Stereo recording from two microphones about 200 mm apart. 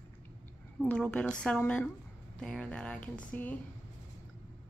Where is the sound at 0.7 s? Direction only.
5° left (ahead or behind).